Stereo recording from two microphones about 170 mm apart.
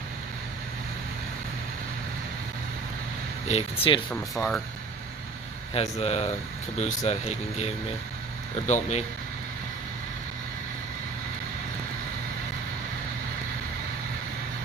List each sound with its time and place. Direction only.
3.4 s speech: 35° left (ahead or behind)
4.1 s speech: 5° left (ahead or behind)
5.7 s speech: 40° left (ahead or behind)